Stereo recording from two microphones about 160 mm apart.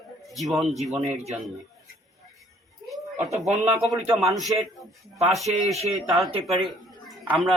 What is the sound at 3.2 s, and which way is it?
Speech, 45° right (ahead or behind).